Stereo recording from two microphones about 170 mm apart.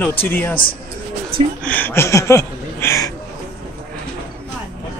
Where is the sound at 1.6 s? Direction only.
10° left (ahead or behind).